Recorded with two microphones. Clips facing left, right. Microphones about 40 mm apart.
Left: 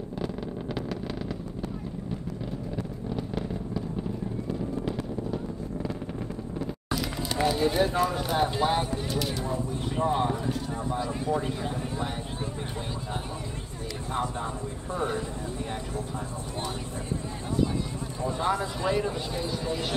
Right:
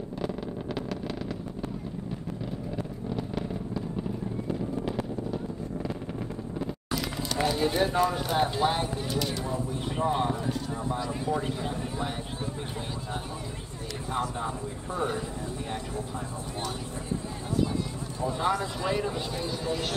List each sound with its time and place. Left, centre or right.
2.7 s vehicle: centre
6.9 s speech: centre
15.0 s speech: centre
18.2 s speech: centre